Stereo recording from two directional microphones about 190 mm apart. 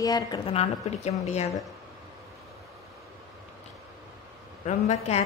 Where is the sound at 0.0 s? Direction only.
20° left (ahead or behind).